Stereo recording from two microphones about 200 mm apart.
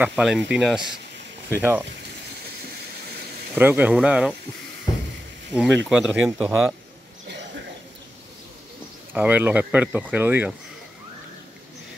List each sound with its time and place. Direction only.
0.0 s speech: 5° right (ahead or behind)
3.5 s speech: 10° right (ahead or behind)
4.9 s a sound: 20° left (ahead or behind)
5.5 s speech: 5° right (ahead or behind)
9.1 s speech: 10° right (ahead or behind)